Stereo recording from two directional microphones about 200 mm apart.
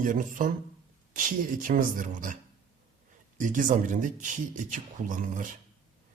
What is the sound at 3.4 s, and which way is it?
Speech, 40° right (ahead or behind).